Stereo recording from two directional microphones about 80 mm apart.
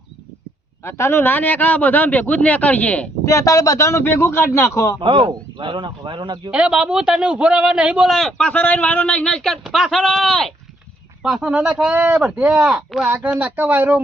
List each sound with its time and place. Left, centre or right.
0.8 s a man's voice: left; by 3.1 s centre
3.2 s speech: left
4.9 s speech: right
6.5 s a man's voice: centre
8.0 s speech: centre
8.3 s a man's voice: centre
11.2 s a man's voice: centre
11.9 s speech: right
12.1 s a man's voice: centre
13.1 s speech: right